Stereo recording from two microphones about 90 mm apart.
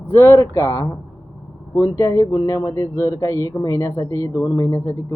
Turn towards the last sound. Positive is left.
turn(degrees=30)  # may be behind; listen again after turning